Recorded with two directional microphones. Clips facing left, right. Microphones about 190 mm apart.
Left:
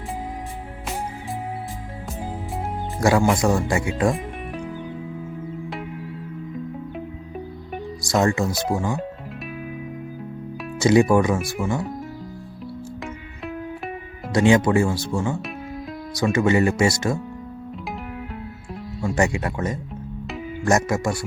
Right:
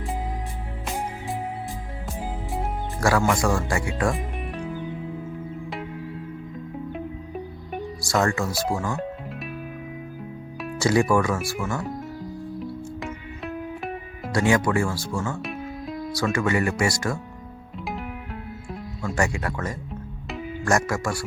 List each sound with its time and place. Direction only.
3.0 s speech: 20° left (ahead or behind)
8.0 s speech: 20° left (ahead or behind)
10.8 s speech: 20° left (ahead or behind)
13.0 s music: centre (ahead or behind)
14.3 s speech: 20° left (ahead or behind)
19.0 s speech: 20° left (ahead or behind)